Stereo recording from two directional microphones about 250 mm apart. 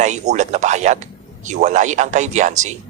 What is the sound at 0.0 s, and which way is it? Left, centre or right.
A man's voice, right.